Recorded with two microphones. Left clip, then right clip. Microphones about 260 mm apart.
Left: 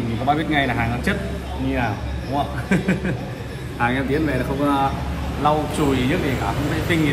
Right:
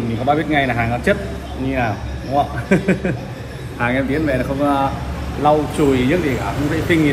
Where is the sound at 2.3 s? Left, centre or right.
Centre.